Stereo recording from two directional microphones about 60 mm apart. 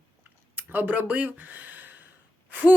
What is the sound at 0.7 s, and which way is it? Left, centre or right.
Speech, right.